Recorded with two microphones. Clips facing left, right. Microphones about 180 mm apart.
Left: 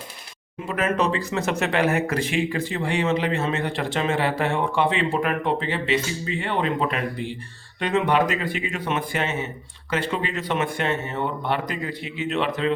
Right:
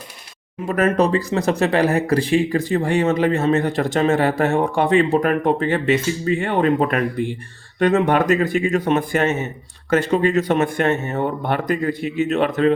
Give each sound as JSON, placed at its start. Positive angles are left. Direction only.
{"t": 0.7, "sound": "speech", "side_deg": -40}